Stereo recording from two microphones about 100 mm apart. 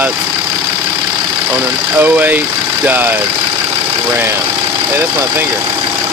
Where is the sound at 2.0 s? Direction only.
20° right (ahead or behind).